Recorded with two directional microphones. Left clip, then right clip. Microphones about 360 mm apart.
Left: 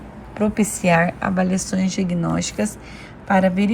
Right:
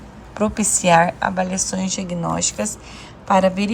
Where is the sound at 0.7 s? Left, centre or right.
Centre.